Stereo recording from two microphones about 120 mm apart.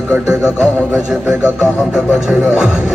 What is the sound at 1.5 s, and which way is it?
Radio, 5° right (ahead or behind).